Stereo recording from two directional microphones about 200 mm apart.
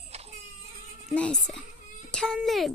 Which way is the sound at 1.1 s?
5° left (ahead or behind).